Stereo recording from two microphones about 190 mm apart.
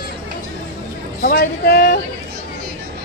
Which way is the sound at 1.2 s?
50° left (ahead or behind).